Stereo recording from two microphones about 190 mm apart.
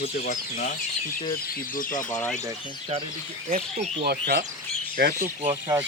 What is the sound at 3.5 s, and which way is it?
Speech, 45° right (ahead or behind).